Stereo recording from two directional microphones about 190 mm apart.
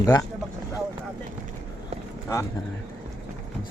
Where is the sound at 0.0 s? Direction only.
15° left (ahead or behind).